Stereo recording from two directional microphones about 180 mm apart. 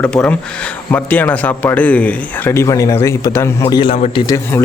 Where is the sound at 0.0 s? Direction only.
5° left (ahead or behind); by 4.2 s 30° left (ahead or behind).